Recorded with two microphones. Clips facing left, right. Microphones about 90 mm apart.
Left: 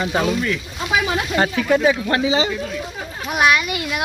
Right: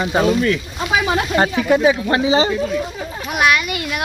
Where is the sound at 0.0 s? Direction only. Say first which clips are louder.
Right 3 dB; 20° right (ahead or behind).